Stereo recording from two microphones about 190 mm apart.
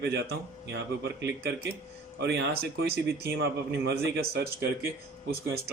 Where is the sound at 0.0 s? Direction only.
60° right (ahead or behind).